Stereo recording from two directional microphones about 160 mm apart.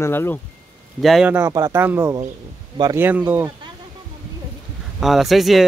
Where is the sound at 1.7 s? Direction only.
10° right (ahead or behind).